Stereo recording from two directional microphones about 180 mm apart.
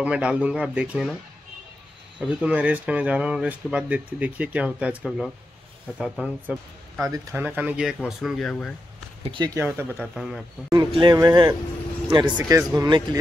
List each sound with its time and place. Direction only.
0.0 s speech: 5° right (ahead or behind)
2.1 s speech: 5° right (ahead or behind)
7.0 s speech: 20° right (ahead or behind); by 8.7 s 5° left (ahead or behind)
9.2 s speech: 25° right (ahead or behind); by 10.4 s centre (ahead or behind)
10.7 s speech: 25° right (ahead or behind)